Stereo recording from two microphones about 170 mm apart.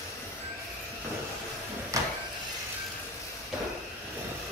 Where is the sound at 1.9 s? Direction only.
20° right (ahead or behind).